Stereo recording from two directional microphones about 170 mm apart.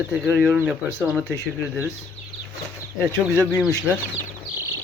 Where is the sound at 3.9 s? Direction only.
5° right (ahead or behind).